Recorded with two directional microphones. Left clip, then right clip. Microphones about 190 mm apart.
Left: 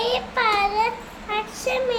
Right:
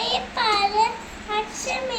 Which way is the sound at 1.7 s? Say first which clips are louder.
Left 7 dB; 10° left (ahead or behind).